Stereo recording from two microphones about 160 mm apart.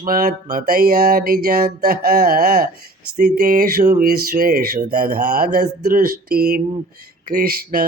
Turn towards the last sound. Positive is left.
turn(degrees=-65)  # may be behind; listen again after turning